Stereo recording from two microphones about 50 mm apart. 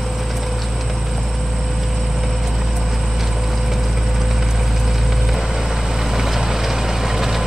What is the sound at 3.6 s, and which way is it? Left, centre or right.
Vehicle, centre.